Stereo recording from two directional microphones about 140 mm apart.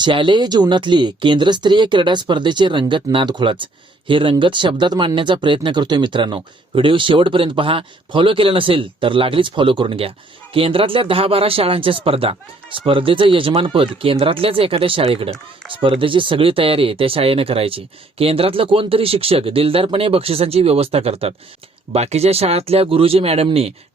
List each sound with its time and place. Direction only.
0.0 s speech: 35° right (ahead or behind)